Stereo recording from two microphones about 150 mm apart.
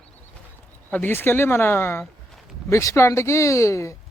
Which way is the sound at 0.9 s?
10° left (ahead or behind).